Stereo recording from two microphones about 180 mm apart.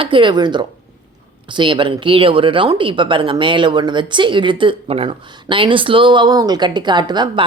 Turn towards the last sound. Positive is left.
turn(degrees=-25)  # may be behind; listen again after turning